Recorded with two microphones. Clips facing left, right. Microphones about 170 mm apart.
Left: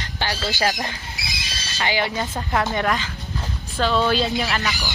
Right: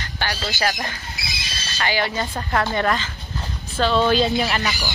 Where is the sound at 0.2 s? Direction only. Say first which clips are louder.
Left 1 dB; 30° left (ahead or behind).